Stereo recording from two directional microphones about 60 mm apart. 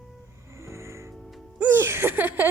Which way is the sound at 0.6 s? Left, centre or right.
Right.